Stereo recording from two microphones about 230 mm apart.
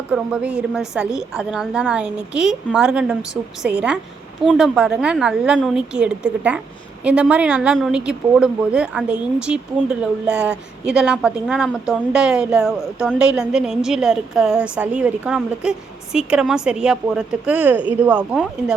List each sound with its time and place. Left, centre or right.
0.1 s a woman's voice: centre
4.4 s a woman's voice: centre